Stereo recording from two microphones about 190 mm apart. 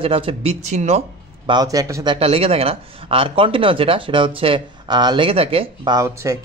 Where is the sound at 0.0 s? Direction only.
30° right (ahead or behind).